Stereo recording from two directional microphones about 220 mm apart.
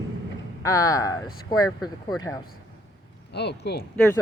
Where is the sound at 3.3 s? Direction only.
50° left (ahead or behind).